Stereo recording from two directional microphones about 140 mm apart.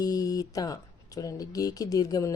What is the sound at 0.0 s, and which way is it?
Speech, 25° left (ahead or behind).